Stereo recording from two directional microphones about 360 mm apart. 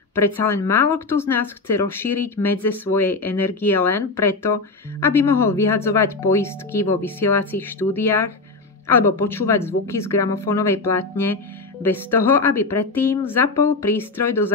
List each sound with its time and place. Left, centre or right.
0.1 s a woman's voice: centre